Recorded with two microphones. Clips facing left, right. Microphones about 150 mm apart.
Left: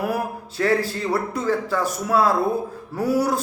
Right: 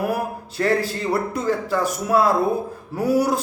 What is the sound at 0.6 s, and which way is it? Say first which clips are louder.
Speech: even; 5° left (ahead or behind).